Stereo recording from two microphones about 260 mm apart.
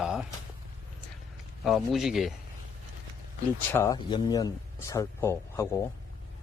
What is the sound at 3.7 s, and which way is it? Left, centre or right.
Speech, centre.